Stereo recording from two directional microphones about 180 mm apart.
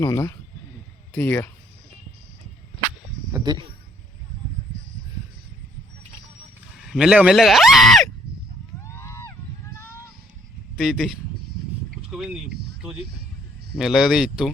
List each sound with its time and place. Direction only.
0.0 s speech: 20° left (ahead or behind)
3.3 s speech: 20° right (ahead or behind)
6.8 s speech: 5° right (ahead or behind)
8.8 s a sound: 15° left (ahead or behind)
10.8 s speech: centre (ahead or behind)
12.1 s speech: 5° right (ahead or behind)
13.7 s speech: centre (ahead or behind)